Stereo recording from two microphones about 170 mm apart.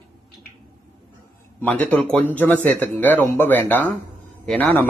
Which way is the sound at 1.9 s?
5° left (ahead or behind).